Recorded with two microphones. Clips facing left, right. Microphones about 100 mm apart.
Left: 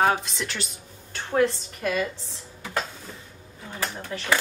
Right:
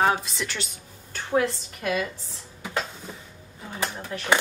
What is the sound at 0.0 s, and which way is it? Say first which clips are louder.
A woman's voice: even; centre (ahead or behind).